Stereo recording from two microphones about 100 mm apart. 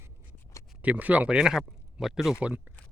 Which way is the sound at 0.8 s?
15° right (ahead or behind).